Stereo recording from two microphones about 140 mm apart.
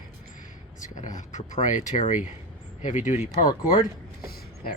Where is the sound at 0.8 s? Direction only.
60° left (ahead or behind).